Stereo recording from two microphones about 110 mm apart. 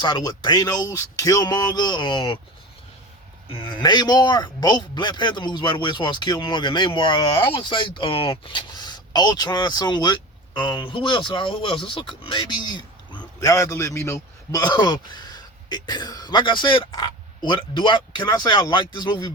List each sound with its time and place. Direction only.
0.0 s speech: 40° left (ahead or behind)
3.5 s a man's voice: 45° left (ahead or behind)
13.4 s a man's voice: 30° left (ahead or behind)
14.6 s speech: 40° left (ahead or behind)